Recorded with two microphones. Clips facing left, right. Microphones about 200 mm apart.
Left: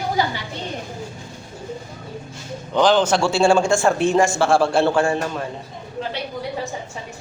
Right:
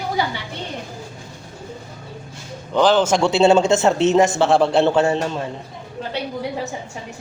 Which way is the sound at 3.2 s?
20° right (ahead or behind).